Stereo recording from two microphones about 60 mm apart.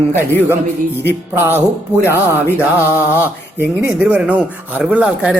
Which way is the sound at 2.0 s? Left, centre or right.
Right.